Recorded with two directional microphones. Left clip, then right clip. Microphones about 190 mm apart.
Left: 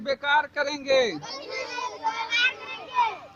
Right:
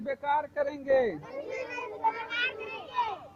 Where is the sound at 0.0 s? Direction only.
50° left (ahead or behind).